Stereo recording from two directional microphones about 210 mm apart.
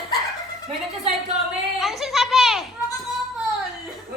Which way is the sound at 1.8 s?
Centre (ahead or behind).